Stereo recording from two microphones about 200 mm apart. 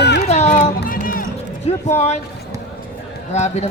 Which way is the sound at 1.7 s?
35° left (ahead or behind).